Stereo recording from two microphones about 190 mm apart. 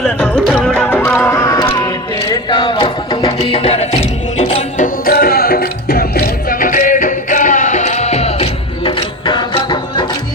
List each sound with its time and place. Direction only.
0.0 s music: 5° left (ahead or behind); by 4.9 s 35° left (ahead or behind)
5.0 s music: 50° left (ahead or behind); by 10.1 s 25° left (ahead or behind)